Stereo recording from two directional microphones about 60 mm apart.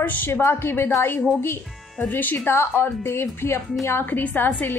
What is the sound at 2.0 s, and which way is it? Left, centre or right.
Speech, left.